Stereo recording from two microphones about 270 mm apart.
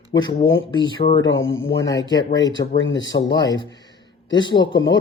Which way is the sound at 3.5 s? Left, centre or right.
Centre.